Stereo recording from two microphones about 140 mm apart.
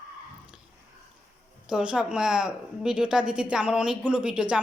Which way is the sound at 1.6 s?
5° right (ahead or behind).